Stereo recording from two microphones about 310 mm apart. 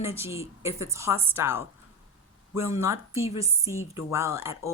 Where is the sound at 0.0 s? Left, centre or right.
Centre.